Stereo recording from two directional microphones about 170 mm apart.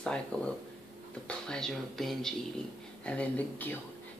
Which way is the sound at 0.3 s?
5° left (ahead or behind).